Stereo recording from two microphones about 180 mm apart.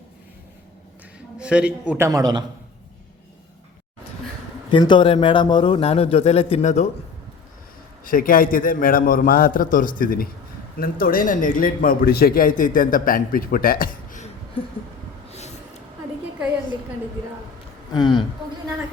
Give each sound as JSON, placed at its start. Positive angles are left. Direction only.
{"t": 1.4, "sound": "a man's voice", "side_deg": -5}
{"t": 2.0, "sound": "a man's voice", "side_deg": -20}
{"t": 4.7, "sound": "a man's voice", "side_deg": 25}
{"t": 8.0, "sound": "a man's voice", "side_deg": 50}
{"t": 15.3, "sound": "a sound", "side_deg": 40}
{"t": 17.9, "sound": "speech", "side_deg": 25}